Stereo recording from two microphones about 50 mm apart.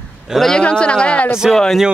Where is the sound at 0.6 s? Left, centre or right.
Left.